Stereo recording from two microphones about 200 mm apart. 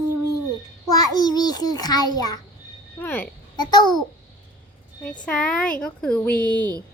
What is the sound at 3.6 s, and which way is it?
Speech, 20° left (ahead or behind).